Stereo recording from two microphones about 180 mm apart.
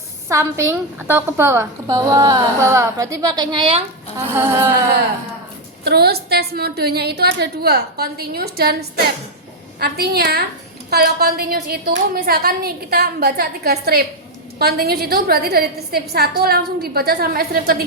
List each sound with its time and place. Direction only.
0.3 s a woman's voice: 15° right (ahead or behind)
4.4 s a woman's voice: 15° right (ahead or behind)
5.8 s a woman's voice: 60° right (ahead or behind)